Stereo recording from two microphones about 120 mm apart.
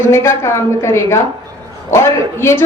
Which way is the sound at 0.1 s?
25° left (ahead or behind).